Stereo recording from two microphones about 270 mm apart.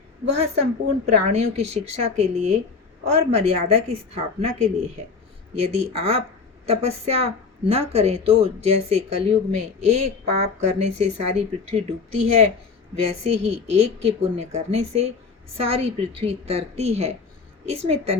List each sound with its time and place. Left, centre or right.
0.3 s a woman's voice: right
2.0 s a woman's voice: right
9.8 s a woman's voice: right
10.6 s a woman's voice: right